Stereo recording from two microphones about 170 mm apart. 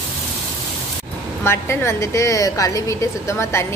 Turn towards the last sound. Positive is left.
turn(degrees=15)  # may be behind; listen again after turning